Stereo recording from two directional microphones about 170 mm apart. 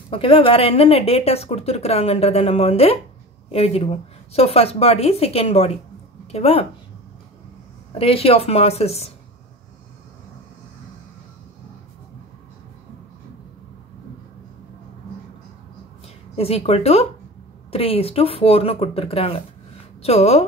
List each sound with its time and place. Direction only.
0.1 s speech: 30° left (ahead or behind)
8.0 s speech: 35° left (ahead or behind)
16.3 s speech: 35° left (ahead or behind)